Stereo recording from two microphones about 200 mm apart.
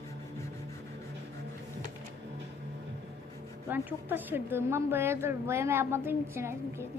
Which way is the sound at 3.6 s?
10° right (ahead or behind).